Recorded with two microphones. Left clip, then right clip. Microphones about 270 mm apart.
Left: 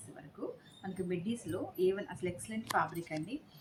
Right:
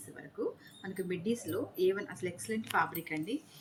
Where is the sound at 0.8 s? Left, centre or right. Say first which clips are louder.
Left 1 dB; centre.